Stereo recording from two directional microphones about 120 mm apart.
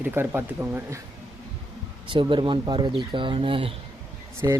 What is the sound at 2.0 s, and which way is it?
Speech, 45° right (ahead or behind).